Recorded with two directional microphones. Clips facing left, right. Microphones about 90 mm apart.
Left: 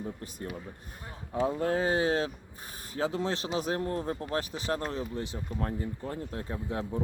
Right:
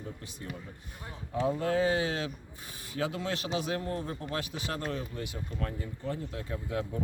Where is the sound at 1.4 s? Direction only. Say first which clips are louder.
Even; 40° left (ahead or behind).